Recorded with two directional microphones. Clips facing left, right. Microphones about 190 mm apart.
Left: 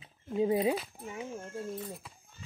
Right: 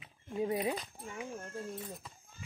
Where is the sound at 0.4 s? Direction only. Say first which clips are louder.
Left 6 dB; 25° left (ahead or behind).